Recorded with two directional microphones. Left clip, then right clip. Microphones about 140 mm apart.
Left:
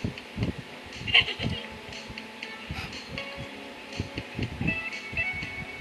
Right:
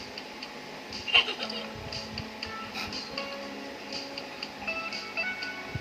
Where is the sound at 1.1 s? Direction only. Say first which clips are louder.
Left 2 dB; 45° left (ahead or behind).